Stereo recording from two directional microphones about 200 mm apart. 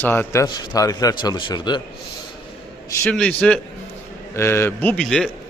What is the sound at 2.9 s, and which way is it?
A man's voice, 5° left (ahead or behind).